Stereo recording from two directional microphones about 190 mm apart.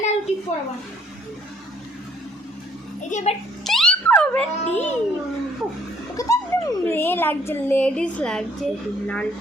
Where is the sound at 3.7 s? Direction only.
5° left (ahead or behind).